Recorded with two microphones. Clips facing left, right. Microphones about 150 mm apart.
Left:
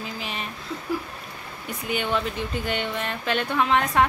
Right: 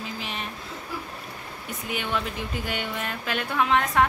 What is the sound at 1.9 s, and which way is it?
Speech, centre (ahead or behind).